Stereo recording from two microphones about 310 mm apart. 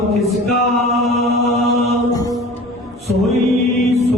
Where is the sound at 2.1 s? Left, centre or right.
Centre.